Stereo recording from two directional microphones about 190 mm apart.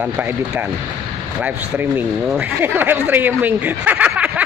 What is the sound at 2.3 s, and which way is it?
Speech, 10° right (ahead or behind).